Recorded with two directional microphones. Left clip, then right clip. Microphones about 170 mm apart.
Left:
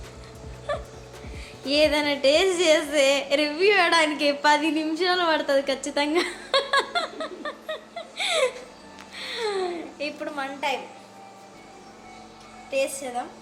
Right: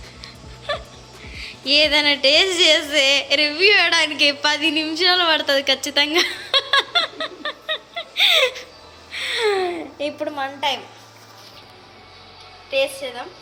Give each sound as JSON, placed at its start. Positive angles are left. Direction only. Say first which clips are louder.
{"t": 0.7, "sound": "music", "louder": "right 4 dB", "side_deg": 5}
{"t": 1.4, "sound": "a woman's voice", "louder": "right 5 dB", "side_deg": 5}
{"t": 9.1, "sound": "music", "louder": "right 9 dB", "side_deg": -30}
{"t": 9.5, "sound": "a sound", "louder": "right 6 dB", "side_deg": -40}
{"t": 10.0, "sound": "a woman's voice", "louder": "right 6 dB", "side_deg": -25}